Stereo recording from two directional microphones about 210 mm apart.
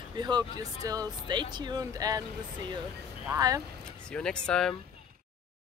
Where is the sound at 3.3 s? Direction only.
15° right (ahead or behind).